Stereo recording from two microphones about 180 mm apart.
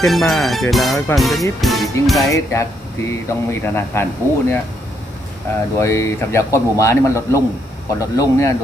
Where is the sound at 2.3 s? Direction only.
15° left (ahead or behind).